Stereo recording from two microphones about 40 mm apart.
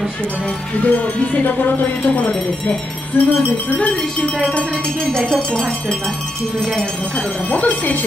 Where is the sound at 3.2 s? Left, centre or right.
Left.